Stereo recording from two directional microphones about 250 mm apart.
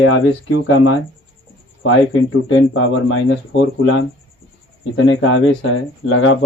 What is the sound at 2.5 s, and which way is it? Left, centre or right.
Speech, left.